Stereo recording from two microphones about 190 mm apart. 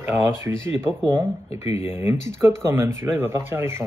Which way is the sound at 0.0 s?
15° right (ahead or behind).